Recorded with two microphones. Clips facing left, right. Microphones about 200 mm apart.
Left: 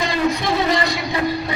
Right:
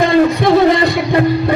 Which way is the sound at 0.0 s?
55° right (ahead or behind).